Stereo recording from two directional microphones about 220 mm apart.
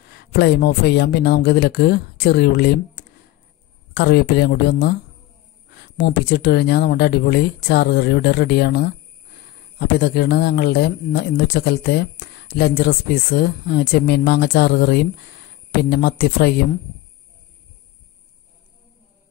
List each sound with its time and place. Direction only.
0.1 s speech: 45° left (ahead or behind)